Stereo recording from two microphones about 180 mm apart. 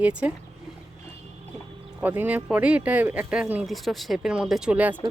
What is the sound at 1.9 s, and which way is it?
Speech, 10° right (ahead or behind).